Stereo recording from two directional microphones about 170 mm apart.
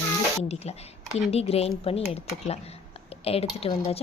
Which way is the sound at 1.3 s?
35° left (ahead or behind).